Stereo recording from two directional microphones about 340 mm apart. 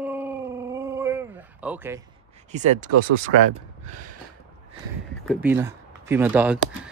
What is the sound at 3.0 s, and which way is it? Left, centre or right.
Speech, right.